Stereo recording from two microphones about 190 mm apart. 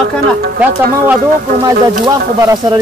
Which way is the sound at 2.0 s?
20° right (ahead or behind).